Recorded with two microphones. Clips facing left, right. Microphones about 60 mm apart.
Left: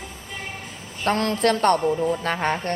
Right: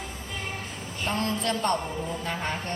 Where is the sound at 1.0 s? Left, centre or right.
Left.